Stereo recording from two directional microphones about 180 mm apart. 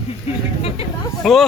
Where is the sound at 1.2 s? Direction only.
Centre (ahead or behind).